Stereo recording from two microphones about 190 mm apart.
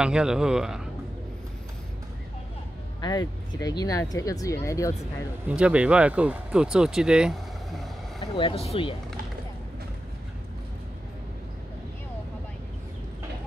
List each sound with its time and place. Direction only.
0.0 s speech: 5° right (ahead or behind)
3.0 s speech: 20° left (ahead or behind)
5.5 s speech: 5° right (ahead or behind)
8.4 s speech: 30° left (ahead or behind)